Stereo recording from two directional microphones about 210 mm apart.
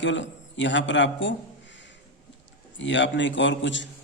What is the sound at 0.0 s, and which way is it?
A man's voice, 60° left (ahead or behind).